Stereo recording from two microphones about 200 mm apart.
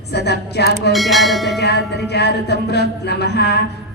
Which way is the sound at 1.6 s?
55° left (ahead or behind).